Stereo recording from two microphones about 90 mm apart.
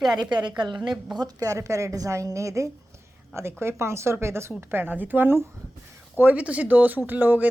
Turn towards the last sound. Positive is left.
turn(degrees=-20)  # may be behind; listen again after turning